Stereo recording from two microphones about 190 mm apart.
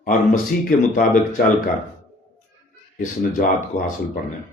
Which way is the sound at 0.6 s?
45° left (ahead or behind).